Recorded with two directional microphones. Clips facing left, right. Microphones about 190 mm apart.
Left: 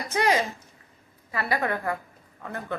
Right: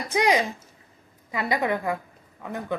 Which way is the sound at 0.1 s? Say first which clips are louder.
Right 2 dB; 15° right (ahead or behind).